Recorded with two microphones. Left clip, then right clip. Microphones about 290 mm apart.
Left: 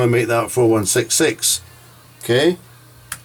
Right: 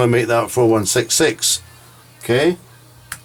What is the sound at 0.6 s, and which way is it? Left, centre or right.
Speech, centre.